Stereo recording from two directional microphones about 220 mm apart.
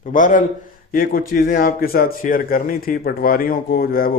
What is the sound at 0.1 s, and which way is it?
Speech, 35° left (ahead or behind).